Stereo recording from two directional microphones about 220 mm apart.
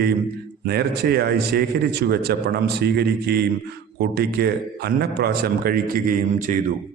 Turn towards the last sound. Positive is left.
turn(degrees=-35)  # may be behind; listen again after turning